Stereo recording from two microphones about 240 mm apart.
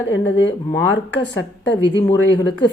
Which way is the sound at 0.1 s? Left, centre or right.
Left.